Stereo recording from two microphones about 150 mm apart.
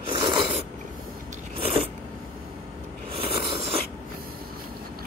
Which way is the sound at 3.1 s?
40° right (ahead or behind).